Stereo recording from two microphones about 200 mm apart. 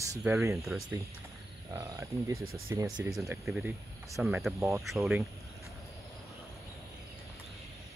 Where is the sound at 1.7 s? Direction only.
15° right (ahead or behind).